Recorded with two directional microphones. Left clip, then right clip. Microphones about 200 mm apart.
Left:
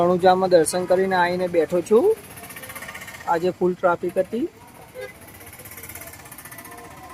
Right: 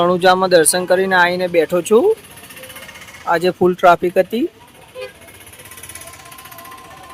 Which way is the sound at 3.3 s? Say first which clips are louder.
Right 6 dB; 10° right (ahead or behind).